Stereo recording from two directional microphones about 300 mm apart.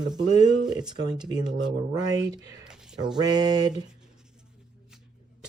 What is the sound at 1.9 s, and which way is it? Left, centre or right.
Speech, centre.